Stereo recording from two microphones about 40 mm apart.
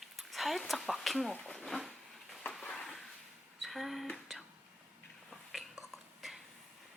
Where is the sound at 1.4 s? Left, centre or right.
Centre.